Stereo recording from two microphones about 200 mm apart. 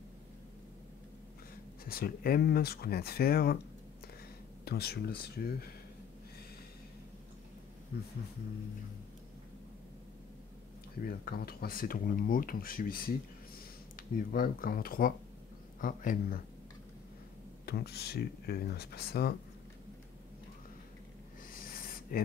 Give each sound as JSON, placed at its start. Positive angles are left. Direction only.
{"t": 1.9, "sound": "speech", "side_deg": 50}
{"t": 4.6, "sound": "speech", "side_deg": 50}
{"t": 11.0, "sound": "speech", "side_deg": 45}
{"t": 17.6, "sound": "speech", "side_deg": 55}
{"t": 21.5, "sound": "a sound", "side_deg": 45}